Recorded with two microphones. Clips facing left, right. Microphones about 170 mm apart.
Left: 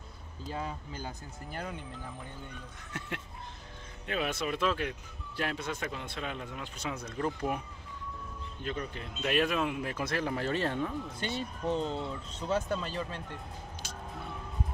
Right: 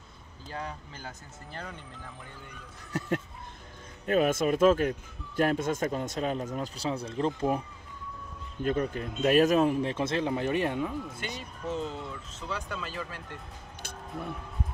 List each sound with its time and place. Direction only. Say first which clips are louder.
0.5 s speech: left 1 dB; 10° left (ahead or behind)
2.9 s a sound: right 9 dB; 40° right (ahead or behind)
4.0 s speech: right 8 dB; 45° right (ahead or behind); by 7.6 s 25° right (ahead or behind)
8.6 s speech: right 9 dB; 45° right (ahead or behind); by 11.4 s 10° right (ahead or behind)
11.8 s speech: left 2 dB; 30° left (ahead or behind)
12.4 s speech: left 5 dB; 45° left (ahead or behind); by 13.4 s 25° left (ahead or behind)